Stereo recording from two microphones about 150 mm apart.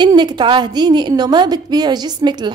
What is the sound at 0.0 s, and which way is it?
A woman's voice, 30° right (ahead or behind).